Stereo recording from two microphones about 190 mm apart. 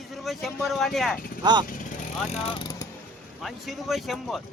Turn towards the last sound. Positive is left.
turn(degrees=0)  # may be behind; listen again after turning